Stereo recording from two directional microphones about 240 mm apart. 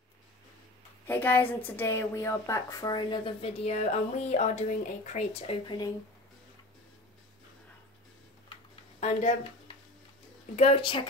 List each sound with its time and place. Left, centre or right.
1.0 s a woman's voice: centre
9.0 s speech: left
10.5 s speech: left